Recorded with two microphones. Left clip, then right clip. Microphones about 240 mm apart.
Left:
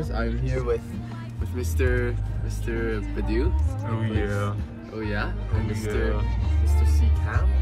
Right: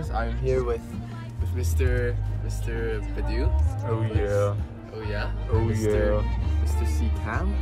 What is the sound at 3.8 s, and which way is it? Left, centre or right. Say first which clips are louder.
Speech: right 1 dB; centre.